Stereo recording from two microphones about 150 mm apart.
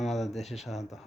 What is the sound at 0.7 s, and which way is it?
Speech, centre (ahead or behind).